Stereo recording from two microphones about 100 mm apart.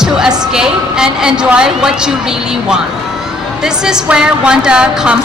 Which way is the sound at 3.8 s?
5° right (ahead or behind).